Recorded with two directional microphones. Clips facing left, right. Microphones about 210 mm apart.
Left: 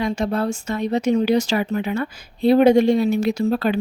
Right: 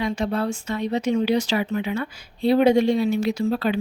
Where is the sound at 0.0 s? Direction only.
45° left (ahead or behind).